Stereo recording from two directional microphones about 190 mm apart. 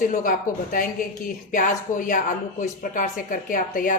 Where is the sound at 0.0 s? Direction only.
45° left (ahead or behind).